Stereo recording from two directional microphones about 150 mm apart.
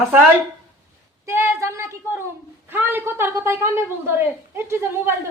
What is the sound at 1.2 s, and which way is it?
Speech, 15° right (ahead or behind).